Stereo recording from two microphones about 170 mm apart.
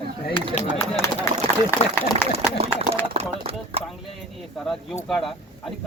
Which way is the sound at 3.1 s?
35° right (ahead or behind).